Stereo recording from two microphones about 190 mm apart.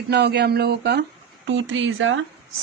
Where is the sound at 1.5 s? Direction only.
85° right.